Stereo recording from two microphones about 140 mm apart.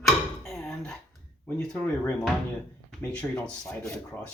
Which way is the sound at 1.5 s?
5° left (ahead or behind).